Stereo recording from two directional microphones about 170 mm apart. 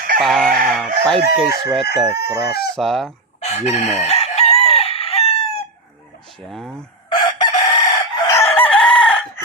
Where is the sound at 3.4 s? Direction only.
40° left (ahead or behind).